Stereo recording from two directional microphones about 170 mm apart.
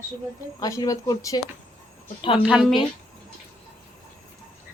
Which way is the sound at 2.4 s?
5° right (ahead or behind).